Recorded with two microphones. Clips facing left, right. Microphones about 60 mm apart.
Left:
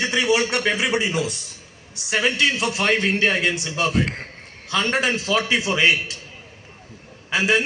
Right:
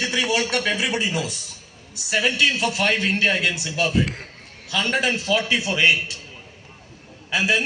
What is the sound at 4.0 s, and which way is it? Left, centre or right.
A man's voice, left.